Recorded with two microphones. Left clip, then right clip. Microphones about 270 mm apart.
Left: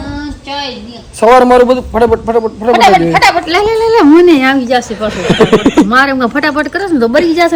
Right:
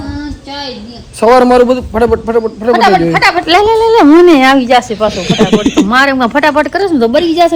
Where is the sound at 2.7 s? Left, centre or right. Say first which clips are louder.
Left 2 dB; left.